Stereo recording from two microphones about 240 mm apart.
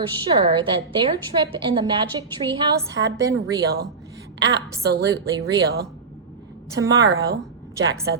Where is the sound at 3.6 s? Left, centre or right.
Right.